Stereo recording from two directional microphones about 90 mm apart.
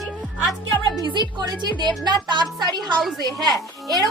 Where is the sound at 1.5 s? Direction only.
55° right (ahead or behind).